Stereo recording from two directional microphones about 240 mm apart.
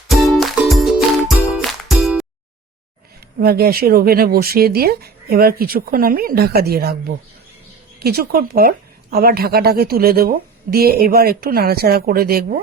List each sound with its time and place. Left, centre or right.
0.1 s music: centre
3.4 s speech: right
8.0 s speech: right